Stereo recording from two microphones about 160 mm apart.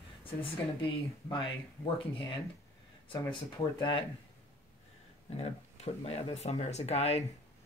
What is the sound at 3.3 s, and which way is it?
Speech, 30° left (ahead or behind).